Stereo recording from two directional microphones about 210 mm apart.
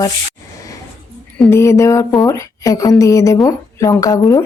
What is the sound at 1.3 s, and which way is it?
Speech, 10° left (ahead or behind).